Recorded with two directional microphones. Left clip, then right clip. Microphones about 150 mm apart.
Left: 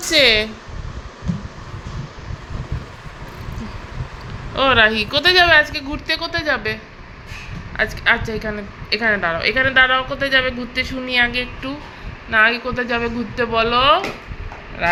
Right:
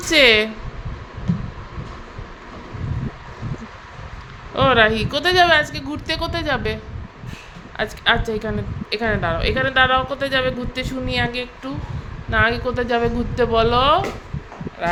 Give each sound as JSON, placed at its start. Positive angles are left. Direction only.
{"t": 0.1, "sound": "speech", "side_deg": -20}
{"t": 4.5, "sound": "a woman's voice", "side_deg": -10}
{"t": 7.8, "sound": "a woman's voice", "side_deg": -15}